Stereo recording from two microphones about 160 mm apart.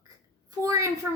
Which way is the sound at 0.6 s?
20° right (ahead or behind).